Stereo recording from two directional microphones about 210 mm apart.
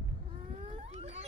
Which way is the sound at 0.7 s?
30° right (ahead or behind).